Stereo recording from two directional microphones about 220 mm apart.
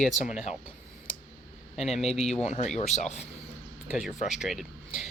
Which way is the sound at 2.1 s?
30° left (ahead or behind).